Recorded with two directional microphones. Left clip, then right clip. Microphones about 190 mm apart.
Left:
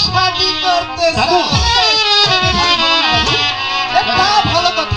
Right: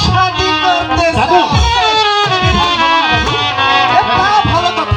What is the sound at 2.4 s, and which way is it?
Music, 30° left (ahead or behind).